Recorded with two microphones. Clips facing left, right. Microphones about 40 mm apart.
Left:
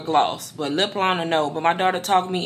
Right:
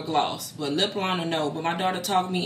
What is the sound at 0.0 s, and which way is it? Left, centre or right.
Speech, left.